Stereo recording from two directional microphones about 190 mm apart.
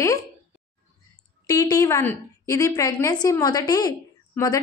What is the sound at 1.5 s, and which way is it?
A woman's voice, 20° left (ahead or behind).